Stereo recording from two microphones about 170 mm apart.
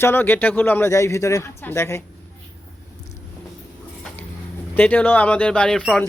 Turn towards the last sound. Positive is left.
turn(degrees=5)  # may be behind; listen again after turning